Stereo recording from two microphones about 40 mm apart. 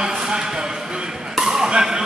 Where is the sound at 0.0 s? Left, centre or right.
Centre.